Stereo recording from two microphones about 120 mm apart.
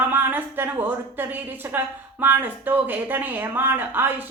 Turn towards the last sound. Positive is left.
turn(degrees=-15)  # may be behind; listen again after turning